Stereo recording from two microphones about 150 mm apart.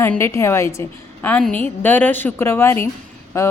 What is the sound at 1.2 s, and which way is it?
A woman's voice, 10° left (ahead or behind).